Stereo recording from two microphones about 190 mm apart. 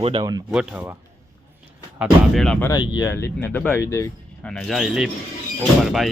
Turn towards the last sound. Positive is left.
turn(degrees=0)  # may be behind; listen again after turning